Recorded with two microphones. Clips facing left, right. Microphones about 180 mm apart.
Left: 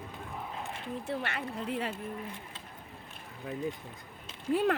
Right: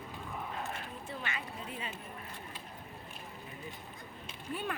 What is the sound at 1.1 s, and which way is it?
Speech, 65° left (ahead or behind).